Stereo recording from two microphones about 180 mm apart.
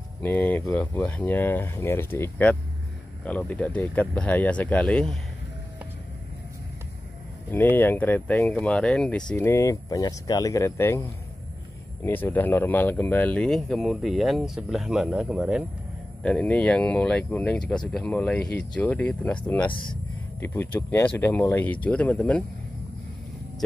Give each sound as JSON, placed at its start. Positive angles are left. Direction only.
{"t": 0.2, "sound": "speech", "side_deg": 10}
{"t": 7.5, "sound": "speech", "side_deg": 10}
{"t": 12.0, "sound": "speech", "side_deg": 10}
{"t": 16.2, "sound": "speech", "side_deg": 5}